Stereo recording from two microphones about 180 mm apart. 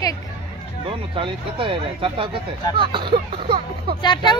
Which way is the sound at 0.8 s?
30° right (ahead or behind).